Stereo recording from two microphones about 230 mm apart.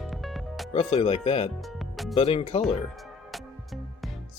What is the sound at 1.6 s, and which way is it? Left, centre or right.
Music, centre.